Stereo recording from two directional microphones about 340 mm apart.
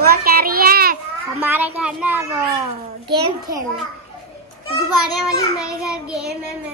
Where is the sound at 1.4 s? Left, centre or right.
Centre.